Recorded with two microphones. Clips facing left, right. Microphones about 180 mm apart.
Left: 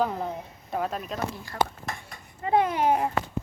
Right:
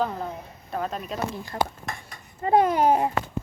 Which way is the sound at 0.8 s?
Centre (ahead or behind).